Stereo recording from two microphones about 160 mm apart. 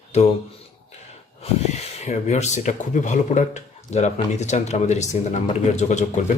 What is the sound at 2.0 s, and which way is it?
Speech, 45° left (ahead or behind).